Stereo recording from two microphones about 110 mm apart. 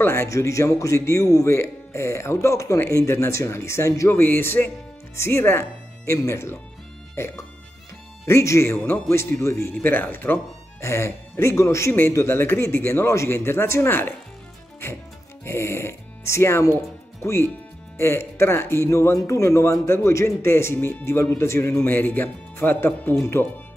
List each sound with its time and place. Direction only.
0.0 s speech: 20° left (ahead or behind)
15.4 s speech: 25° left (ahead or behind)